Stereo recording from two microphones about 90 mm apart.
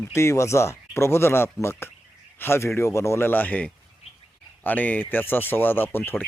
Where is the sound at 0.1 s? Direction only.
30° left (ahead or behind).